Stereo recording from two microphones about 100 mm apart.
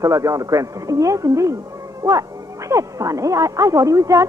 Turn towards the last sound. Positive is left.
turn(degrees=-30)  # may be behind; listen again after turning